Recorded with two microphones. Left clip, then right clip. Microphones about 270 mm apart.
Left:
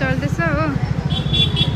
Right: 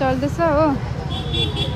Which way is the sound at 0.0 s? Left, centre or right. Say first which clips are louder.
Right 2 dB; centre.